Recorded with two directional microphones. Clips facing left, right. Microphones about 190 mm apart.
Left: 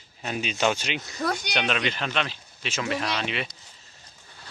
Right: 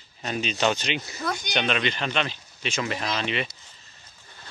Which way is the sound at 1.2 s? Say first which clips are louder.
Left 3 dB; 35° left (ahead or behind).